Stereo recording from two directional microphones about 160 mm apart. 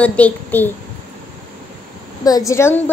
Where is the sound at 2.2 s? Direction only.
20° left (ahead or behind).